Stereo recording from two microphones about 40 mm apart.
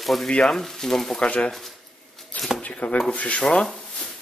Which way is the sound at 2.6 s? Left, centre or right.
Left.